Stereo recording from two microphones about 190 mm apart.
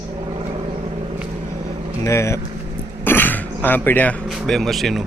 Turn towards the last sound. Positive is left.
turn(degrees=0)  # may be behind; listen again after turning